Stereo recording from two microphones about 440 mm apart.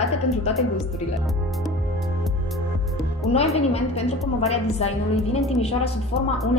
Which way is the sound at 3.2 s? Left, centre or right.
Centre.